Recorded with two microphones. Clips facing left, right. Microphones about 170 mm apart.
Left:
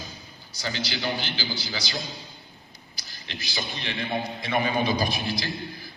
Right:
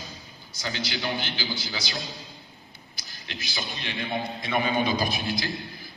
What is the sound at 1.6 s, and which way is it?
Speech, 20° right (ahead or behind).